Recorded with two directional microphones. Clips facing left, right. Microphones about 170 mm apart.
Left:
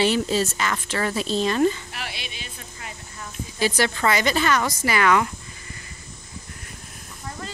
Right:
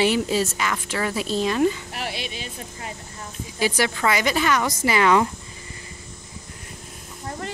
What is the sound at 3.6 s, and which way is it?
A woman's voice, 10° right (ahead or behind).